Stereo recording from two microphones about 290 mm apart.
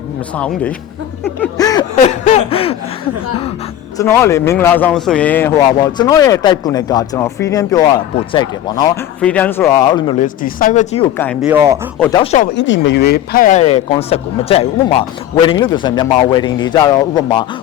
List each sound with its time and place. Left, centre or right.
0.3 s speech: centre
1.2 s a sound: centre
3.9 s a man's voice: centre
10.2 s speech: left
11.4 s speech: centre
12.1 s speech: left
12.5 s a man's voice: left; by 17.4 s centre